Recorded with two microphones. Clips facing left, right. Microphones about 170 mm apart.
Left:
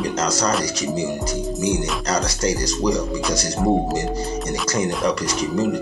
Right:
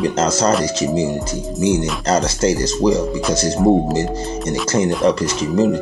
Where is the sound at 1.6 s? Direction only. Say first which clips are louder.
Right 7 dB; 25° right (ahead or behind).